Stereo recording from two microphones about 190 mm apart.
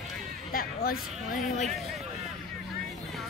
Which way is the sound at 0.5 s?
50° left (ahead or behind).